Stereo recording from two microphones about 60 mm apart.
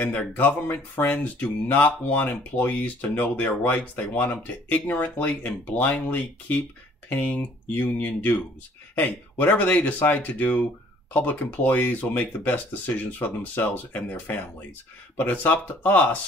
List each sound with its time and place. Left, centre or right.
0.0 s speech: left